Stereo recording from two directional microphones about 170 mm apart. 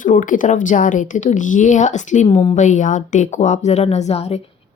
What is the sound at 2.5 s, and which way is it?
A woman's voice, 45° left (ahead or behind).